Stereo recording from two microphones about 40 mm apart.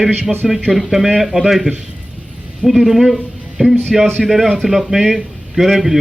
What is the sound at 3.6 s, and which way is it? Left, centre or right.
Speech, centre.